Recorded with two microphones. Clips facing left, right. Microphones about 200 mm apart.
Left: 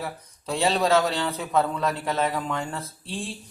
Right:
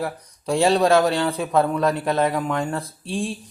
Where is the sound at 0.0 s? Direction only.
15° right (ahead or behind).